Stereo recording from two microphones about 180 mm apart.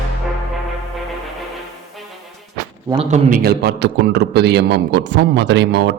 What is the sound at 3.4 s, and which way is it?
A man's voice, 60° right (ahead or behind).